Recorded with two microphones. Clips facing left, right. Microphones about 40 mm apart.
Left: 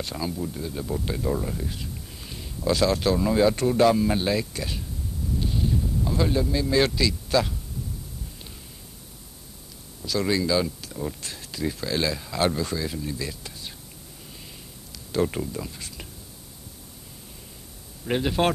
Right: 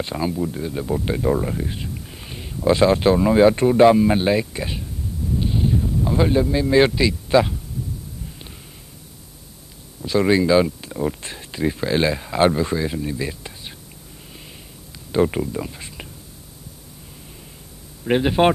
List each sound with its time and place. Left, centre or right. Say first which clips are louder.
0.0 s speech: right 6 dB; right
5.3 s a sound: right 5 dB; right
10.0 s speech: right 7 dB; right
15.0 s speech: right 6 dB; right
18.0 s speech: right 7 dB; right